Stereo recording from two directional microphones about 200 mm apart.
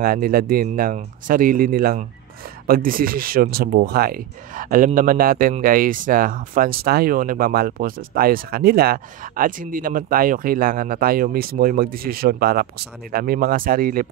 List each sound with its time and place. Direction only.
0.0 s speech: 45° right (ahead or behind)